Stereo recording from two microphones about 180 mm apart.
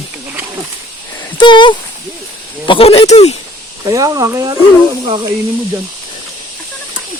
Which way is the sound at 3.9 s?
20° right (ahead or behind).